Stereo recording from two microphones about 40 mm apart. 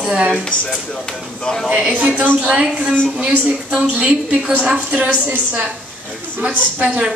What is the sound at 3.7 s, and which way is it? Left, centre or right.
A woman's voice, right.